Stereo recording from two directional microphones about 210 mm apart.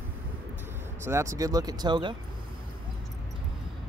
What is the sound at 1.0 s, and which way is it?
Speech, 15° right (ahead or behind).